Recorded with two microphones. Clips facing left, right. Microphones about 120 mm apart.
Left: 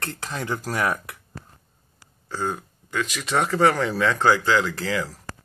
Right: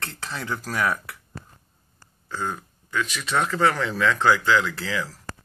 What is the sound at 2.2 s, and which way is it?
Speech, 30° left (ahead or behind).